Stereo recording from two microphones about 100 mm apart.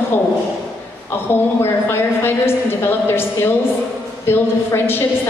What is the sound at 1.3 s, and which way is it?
A man's voice, 25° left (ahead or behind).